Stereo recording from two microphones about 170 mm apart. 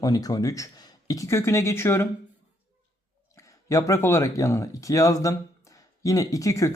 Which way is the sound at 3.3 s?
20° left (ahead or behind).